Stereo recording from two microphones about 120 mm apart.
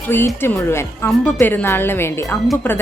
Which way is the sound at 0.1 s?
20° left (ahead or behind).